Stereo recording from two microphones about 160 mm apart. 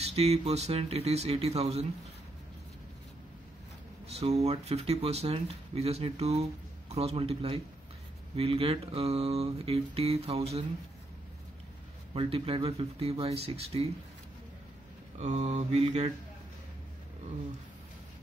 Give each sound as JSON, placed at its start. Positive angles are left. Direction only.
{"t": 0.0, "sound": "speech", "side_deg": -40}
{"t": 4.1, "sound": "speech", "side_deg": -40}
{"t": 12.1, "sound": "speech", "side_deg": -35}
{"t": 15.1, "sound": "mantra", "side_deg": -45}